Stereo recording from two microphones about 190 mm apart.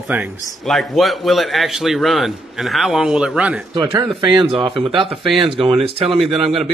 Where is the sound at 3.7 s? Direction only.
25° right (ahead or behind).